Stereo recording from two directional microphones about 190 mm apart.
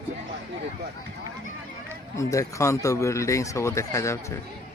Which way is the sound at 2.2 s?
15° left (ahead or behind).